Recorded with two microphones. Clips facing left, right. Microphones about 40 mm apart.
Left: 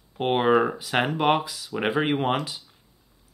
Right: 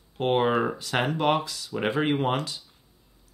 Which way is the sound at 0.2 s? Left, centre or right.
Centre.